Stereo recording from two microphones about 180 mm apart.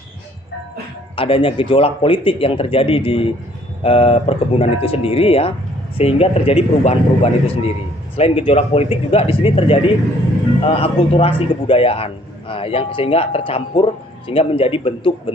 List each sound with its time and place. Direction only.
1.1 s a man's voice: 30° left (ahead or behind)